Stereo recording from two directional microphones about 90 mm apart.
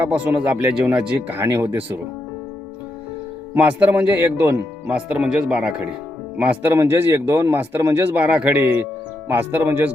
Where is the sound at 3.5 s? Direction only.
15° right (ahead or behind).